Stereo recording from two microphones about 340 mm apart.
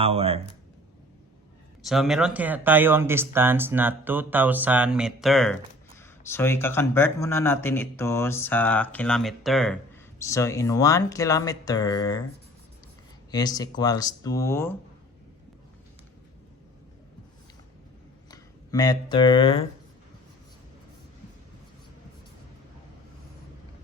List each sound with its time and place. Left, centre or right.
0.0 s speech: centre
1.8 s speech: centre
13.3 s speech: centre
18.3 s speech: centre